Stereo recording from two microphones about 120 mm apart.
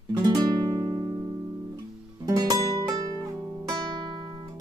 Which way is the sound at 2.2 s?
35° right (ahead or behind).